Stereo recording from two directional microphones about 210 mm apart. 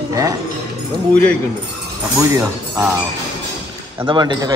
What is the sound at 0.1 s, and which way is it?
Speech, 15° right (ahead or behind).